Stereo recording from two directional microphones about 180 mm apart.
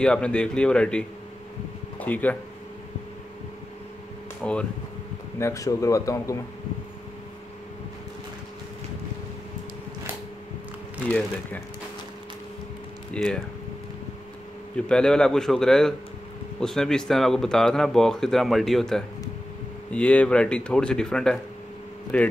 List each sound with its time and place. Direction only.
0.0 s speech: 5° left (ahead or behind)
4.4 s speech: 5° left (ahead or behind)
5.4 s speech: 20° left (ahead or behind)
11.1 s speech: 10° left (ahead or behind)
13.1 s speech: 5° left (ahead or behind)
14.8 s speech: 5° left (ahead or behind)